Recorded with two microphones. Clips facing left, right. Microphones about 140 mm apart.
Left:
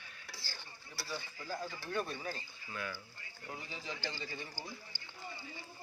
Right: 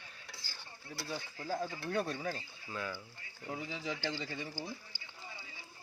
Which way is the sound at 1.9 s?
85° right.